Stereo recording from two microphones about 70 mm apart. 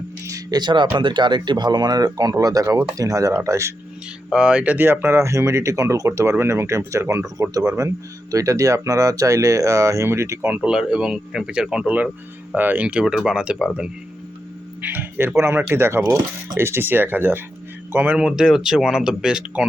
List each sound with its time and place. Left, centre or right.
0.3 s music: right
1.1 s speech: right
4.3 s speech: centre
4.9 s speech: right
7.5 s speech: right
10.5 s speech: centre
14.8 s speech: right
15.4 s speech: right
18.2 s speech: centre